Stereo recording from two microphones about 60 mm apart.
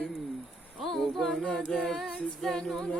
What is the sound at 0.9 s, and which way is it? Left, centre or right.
A capella, centre.